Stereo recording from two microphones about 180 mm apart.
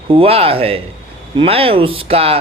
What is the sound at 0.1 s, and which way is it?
Speech, 30° right (ahead or behind).